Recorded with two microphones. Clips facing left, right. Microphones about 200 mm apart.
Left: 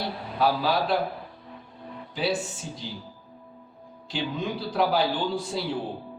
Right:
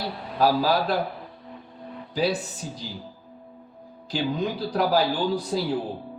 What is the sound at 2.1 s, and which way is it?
Speech, 40° right (ahead or behind).